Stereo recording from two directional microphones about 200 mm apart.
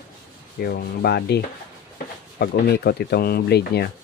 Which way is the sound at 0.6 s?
50° left (ahead or behind).